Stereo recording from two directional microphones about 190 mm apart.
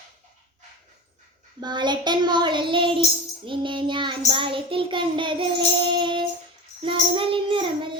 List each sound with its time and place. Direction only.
1.6 s child singing: 25° right (ahead or behind)